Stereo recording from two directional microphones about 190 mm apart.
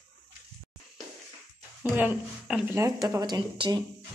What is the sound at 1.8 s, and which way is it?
Speech, 10° right (ahead or behind).